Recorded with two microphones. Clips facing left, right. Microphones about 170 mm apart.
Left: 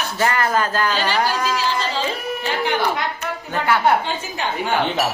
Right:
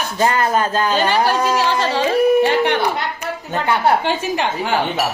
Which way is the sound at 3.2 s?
25° right (ahead or behind).